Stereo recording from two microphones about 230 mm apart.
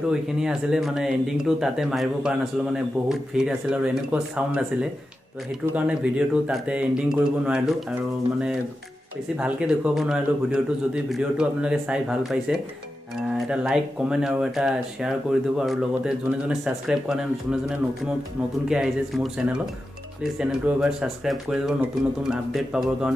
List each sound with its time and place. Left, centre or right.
0.1 s speech: centre
5.8 s speech: centre
9.4 s speech: centre